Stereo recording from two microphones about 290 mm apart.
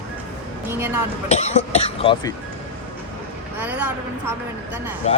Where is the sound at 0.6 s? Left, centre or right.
Centre.